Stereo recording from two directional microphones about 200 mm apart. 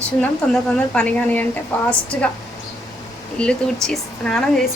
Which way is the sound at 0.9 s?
5° left (ahead or behind).